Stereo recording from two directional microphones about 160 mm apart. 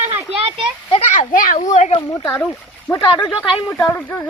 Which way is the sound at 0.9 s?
45° left (ahead or behind).